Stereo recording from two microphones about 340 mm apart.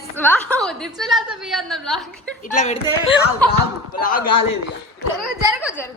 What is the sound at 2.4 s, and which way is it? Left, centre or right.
Speech, left.